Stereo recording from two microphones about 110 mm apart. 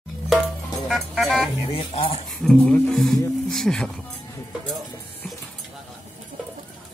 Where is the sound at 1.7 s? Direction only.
55° left (ahead or behind).